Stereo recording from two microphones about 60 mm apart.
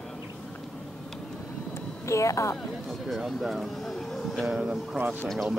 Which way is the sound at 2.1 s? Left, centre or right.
Left.